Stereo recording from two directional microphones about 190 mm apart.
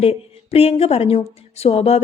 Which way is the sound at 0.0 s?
30° left (ahead or behind).